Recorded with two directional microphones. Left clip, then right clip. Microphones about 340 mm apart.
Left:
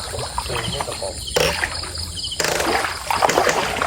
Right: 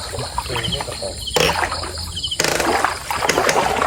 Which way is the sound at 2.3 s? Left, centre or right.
Right.